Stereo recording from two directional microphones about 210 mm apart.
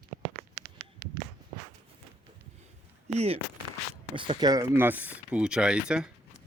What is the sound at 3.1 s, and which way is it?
Speech, 30° right (ahead or behind).